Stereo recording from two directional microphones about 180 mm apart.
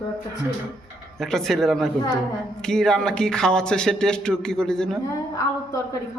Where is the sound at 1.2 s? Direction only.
Centre (ahead or behind).